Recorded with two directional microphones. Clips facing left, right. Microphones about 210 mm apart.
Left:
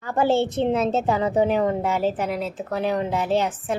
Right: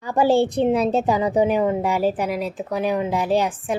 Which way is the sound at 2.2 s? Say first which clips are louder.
Right 2 dB; 25° left (ahead or behind).